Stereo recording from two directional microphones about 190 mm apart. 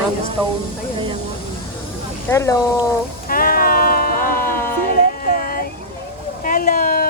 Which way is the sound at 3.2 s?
50° left (ahead or behind).